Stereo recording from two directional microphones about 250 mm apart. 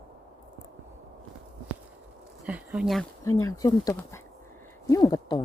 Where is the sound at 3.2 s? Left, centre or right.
Centre.